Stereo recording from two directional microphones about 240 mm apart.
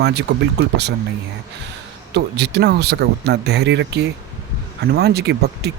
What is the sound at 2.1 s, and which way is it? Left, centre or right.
Speech, right.